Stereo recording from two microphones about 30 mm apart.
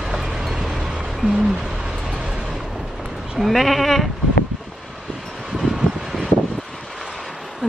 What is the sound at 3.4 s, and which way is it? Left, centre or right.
Sheep, centre.